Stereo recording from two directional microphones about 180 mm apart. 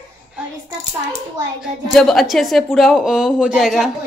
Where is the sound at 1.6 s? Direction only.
Centre (ahead or behind).